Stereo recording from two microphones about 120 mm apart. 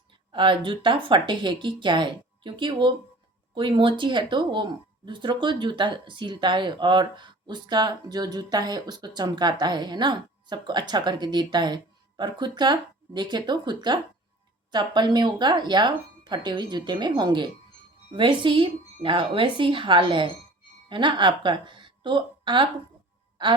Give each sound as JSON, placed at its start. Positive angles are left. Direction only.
{"t": 0.3, "sound": "a woman's voice", "side_deg": -45}